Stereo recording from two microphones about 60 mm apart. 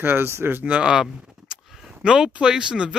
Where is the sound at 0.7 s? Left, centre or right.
Centre.